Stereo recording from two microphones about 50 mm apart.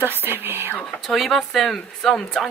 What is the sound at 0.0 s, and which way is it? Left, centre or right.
Whispering, right.